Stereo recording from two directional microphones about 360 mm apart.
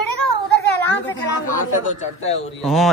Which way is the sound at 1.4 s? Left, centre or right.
Left.